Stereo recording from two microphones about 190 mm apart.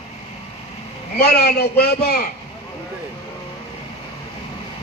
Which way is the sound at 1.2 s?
55° left (ahead or behind).